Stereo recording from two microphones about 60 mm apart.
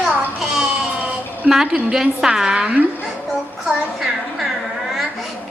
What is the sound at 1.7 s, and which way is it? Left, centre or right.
A woman's voice, centre.